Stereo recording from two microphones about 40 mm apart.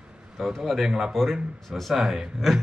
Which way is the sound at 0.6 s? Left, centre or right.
Centre.